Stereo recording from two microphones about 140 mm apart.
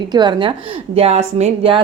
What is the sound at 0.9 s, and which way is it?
Speech, 50° right (ahead or behind).